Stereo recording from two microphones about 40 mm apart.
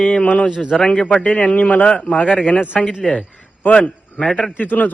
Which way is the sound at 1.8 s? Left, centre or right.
Left.